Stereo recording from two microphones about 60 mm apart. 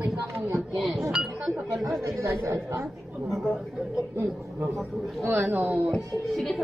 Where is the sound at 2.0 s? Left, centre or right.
Right.